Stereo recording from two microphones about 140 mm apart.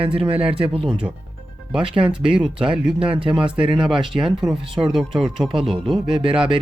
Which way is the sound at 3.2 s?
35° right (ahead or behind).